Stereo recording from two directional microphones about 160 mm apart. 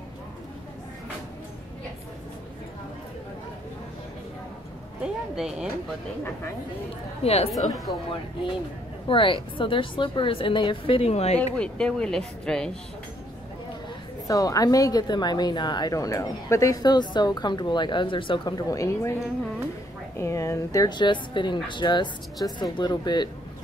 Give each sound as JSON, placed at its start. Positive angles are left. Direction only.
{"t": 5.0, "sound": "a sound", "side_deg": -5}
{"t": 7.2, "sound": "a woman's voice", "side_deg": 40}
{"t": 7.5, "sound": "speech", "side_deg": 0}
{"t": 9.0, "sound": "a woman's voice", "side_deg": 30}
{"t": 11.5, "sound": "speech", "side_deg": 5}
{"t": 14.2, "sound": "a woman's voice", "side_deg": 20}
{"t": 20.2, "sound": "a woman's voice", "side_deg": 20}